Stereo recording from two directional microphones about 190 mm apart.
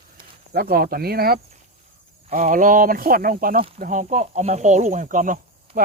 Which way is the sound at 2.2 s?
40° right (ahead or behind).